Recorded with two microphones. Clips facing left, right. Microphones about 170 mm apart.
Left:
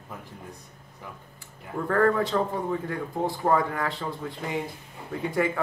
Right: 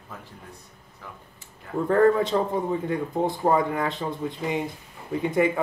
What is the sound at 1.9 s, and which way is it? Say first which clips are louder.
A man's voice: right 3 dB; 20° right (ahead or behind).